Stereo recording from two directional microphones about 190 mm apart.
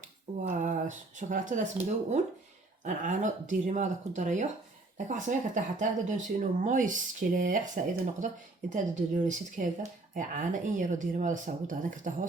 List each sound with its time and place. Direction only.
0.4 s speech: 45° right (ahead or behind)